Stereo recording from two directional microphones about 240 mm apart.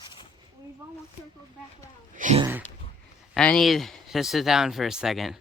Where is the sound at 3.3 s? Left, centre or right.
Centre.